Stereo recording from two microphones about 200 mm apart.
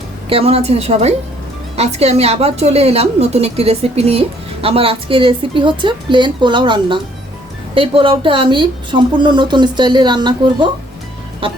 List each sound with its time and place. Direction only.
0.3 s a woman's voice: 30° right (ahead or behind)